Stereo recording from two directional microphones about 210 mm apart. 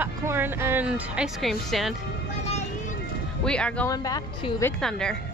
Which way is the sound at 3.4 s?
5° left (ahead or behind).